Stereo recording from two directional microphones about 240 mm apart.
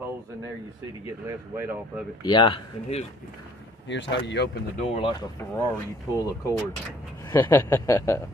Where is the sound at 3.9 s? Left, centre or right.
Left.